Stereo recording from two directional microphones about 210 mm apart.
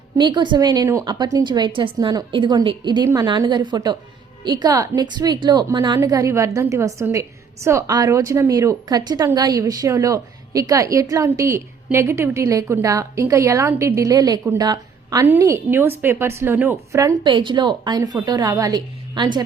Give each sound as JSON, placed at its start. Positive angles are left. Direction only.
{"t": 0.2, "sound": "a woman's voice", "side_deg": -20}